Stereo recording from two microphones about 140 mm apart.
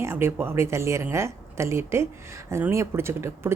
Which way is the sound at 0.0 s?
20° right (ahead or behind).